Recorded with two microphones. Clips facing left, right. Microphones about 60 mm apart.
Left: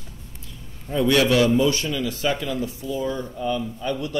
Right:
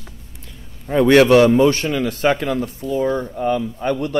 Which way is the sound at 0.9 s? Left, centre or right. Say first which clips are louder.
Right 8 dB; right.